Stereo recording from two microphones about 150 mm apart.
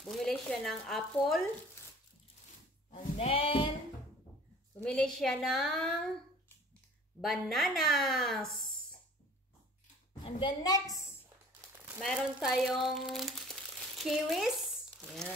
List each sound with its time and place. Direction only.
0.0 s speech: 5° left (ahead or behind)
2.9 s sheep: 40° left (ahead or behind)
4.8 s speech: 5° left (ahead or behind)
7.2 s speech: centre (ahead or behind)
10.2 s a woman's voice: 30° left (ahead or behind)
11.7 s a sound: 15° right (ahead or behind)
12.0 s speech: centre (ahead or behind)
15.0 s crumpling: 5° left (ahead or behind)